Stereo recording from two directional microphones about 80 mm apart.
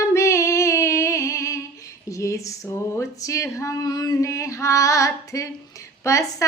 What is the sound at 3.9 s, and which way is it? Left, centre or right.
Female singing, left.